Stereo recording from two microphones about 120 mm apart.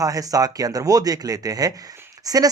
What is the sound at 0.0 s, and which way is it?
Speech, 30° right (ahead or behind).